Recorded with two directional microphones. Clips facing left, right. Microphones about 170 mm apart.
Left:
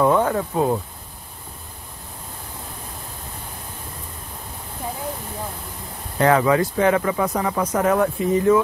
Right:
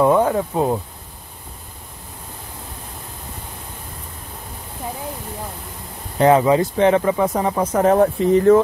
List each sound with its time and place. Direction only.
0.0 s speech: 15° right (ahead or behind)
6.1 s speech: 20° right (ahead or behind)